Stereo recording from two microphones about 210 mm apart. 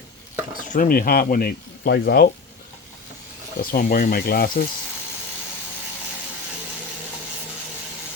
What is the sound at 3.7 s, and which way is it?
Speech, 40° left (ahead or behind).